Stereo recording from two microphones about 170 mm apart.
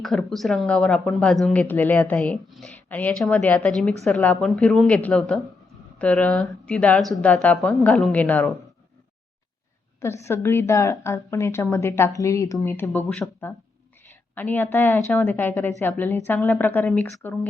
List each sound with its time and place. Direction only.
0.0 s a woman's voice: centre (ahead or behind)
10.0 s a woman's voice: 15° left (ahead or behind)